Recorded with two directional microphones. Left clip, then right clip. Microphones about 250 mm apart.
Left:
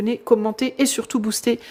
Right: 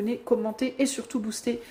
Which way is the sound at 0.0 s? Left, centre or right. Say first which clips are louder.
Left 7 dB; left.